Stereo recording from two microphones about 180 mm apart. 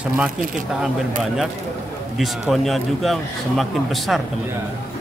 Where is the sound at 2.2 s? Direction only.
Centre (ahead or behind).